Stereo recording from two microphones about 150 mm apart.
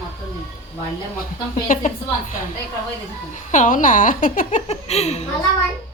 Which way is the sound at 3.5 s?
60° left (ahead or behind).